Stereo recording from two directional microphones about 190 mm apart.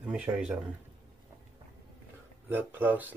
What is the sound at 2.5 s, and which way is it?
Speech, 10° right (ahead or behind).